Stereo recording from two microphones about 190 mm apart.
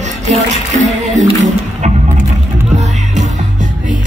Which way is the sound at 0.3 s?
40° right (ahead or behind).